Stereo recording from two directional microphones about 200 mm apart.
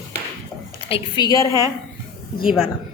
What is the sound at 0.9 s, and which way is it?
Speech, 25° left (ahead or behind).